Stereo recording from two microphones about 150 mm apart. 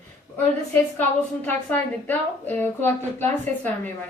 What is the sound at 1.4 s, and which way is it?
A woman's voice, 10° left (ahead or behind).